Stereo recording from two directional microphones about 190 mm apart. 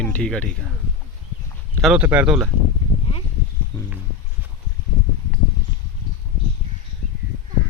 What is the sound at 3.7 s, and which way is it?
Speech, 5° left (ahead or behind).